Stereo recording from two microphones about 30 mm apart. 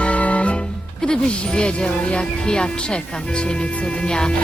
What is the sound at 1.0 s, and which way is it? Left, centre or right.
Speech, left.